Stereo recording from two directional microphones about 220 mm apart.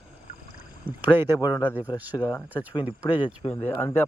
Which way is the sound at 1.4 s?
20° left (ahead or behind).